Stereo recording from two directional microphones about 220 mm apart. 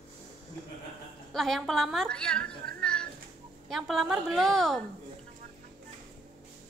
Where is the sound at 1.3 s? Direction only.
Centre (ahead or behind).